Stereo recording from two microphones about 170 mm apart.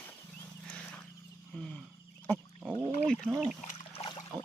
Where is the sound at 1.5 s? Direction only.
5° left (ahead or behind).